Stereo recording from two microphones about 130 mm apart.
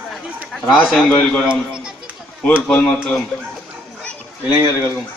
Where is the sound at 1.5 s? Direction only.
5° right (ahead or behind).